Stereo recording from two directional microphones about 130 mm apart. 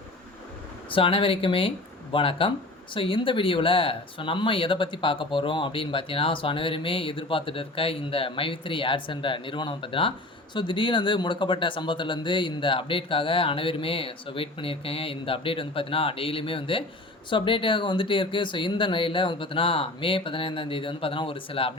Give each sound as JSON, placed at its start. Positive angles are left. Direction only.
{"t": 0.9, "sound": "speech", "side_deg": 45}